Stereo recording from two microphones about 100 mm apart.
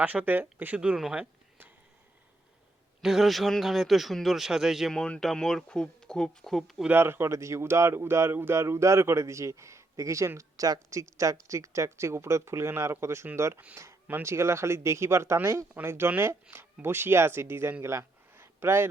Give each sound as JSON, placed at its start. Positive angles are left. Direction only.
{"t": 0.0, "sound": "a man's voice", "side_deg": -15}
{"t": 3.0, "sound": "a man's voice", "side_deg": -5}
{"t": 4.9, "sound": "speech", "side_deg": 10}
{"t": 6.8, "sound": "speech", "side_deg": -20}